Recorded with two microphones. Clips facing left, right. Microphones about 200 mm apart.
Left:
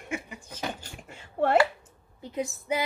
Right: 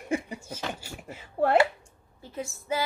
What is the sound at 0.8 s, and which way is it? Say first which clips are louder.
Speech: right 4 dB; 5° right (ahead or behind).